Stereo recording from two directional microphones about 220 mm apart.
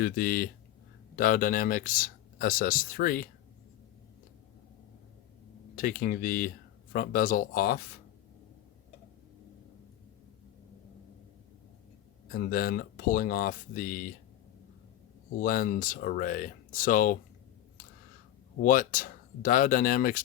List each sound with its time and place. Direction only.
0.0 s speech: 45° left (ahead or behind)
5.7 s speech: 40° left (ahead or behind)
12.3 s speech: 45° left (ahead or behind)
15.4 s speech: 40° left (ahead or behind)
18.6 s speech: 40° left (ahead or behind)